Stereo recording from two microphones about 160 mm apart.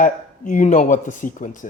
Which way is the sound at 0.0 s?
55° left (ahead or behind).